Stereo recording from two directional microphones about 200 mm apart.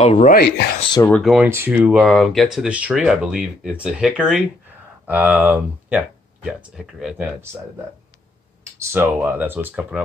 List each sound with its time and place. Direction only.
0.0 s speech: 25° left (ahead or behind)
0.3 s speech: 45° left (ahead or behind)
1.0 s speech: centre (ahead or behind)
8.9 s speech: 10° right (ahead or behind)